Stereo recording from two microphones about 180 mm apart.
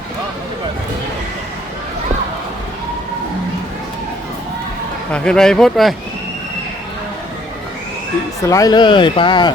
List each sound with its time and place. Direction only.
5.1 s speech: 5° left (ahead or behind)
8.4 s speech: 20° left (ahead or behind)